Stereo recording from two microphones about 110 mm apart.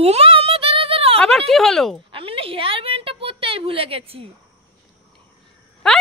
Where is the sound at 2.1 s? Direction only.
55° right (ahead or behind).